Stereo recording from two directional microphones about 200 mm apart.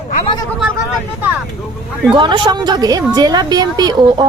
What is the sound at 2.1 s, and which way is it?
A woman's voice, 25° right (ahead or behind).